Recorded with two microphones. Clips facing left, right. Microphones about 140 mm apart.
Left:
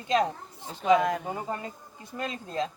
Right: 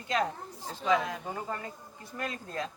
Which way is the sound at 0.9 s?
55° left (ahead or behind).